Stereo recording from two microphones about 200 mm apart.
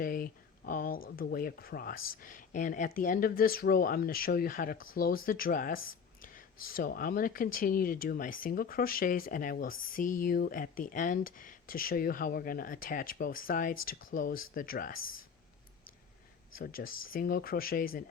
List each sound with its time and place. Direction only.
0.0 s speech: 45° left (ahead or behind)
16.6 s speech: 45° left (ahead or behind)